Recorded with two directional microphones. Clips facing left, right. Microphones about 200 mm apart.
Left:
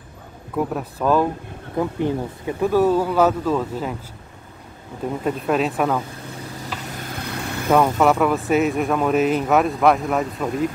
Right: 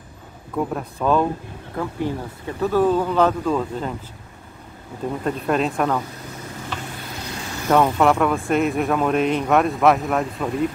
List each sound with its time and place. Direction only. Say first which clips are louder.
0.6 s speech: left 1 dB; 5° left (ahead or behind)
1.8 s speech: left 4 dB; 20° left (ahead or behind)
5.2 s speech: left 1 dB; 5° left (ahead or behind)
7.2 s vehicle: left 2 dB; 60° left (ahead or behind)
7.7 s speech: even; centre (ahead or behind)